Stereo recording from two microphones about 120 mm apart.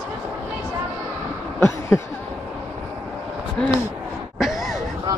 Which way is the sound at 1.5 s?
20° left (ahead or behind).